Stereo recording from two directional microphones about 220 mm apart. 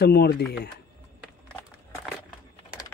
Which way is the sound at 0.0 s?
45° left (ahead or behind).